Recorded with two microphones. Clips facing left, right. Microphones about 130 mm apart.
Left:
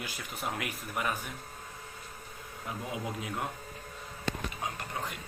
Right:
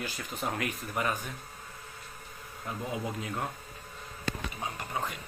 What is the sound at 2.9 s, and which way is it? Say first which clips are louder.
Speech: right 1 dB; 10° left (ahead or behind).